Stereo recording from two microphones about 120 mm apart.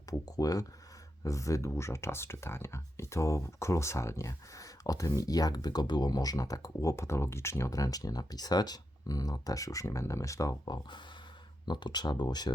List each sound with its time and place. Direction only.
0.1 s speech: 30° left (ahead or behind)